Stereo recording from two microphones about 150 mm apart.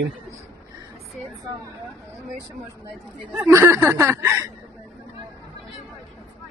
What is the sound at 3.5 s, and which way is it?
Speech, 15° right (ahead or behind).